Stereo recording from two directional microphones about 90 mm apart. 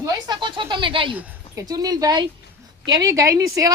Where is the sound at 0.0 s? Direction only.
40° right (ahead or behind).